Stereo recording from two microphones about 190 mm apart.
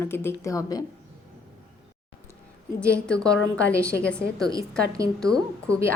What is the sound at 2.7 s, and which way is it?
Speech, 5° left (ahead or behind).